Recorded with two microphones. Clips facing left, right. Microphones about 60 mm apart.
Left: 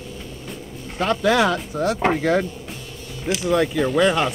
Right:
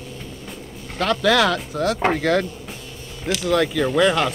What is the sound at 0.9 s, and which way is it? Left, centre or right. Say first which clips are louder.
Speech: even; left.